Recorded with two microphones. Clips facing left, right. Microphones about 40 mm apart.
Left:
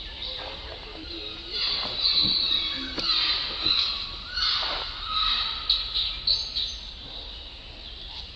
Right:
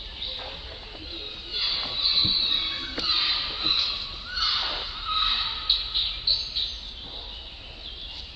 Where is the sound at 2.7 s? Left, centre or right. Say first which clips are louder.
Even; centre.